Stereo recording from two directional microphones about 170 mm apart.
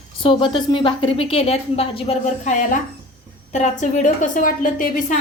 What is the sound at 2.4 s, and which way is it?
A woman's voice, 45° left (ahead or behind).